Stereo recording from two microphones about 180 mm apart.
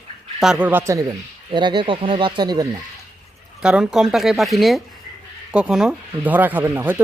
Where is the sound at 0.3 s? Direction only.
5° right (ahead or behind).